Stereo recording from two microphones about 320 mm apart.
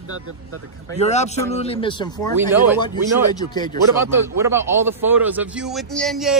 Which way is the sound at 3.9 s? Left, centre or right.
Centre.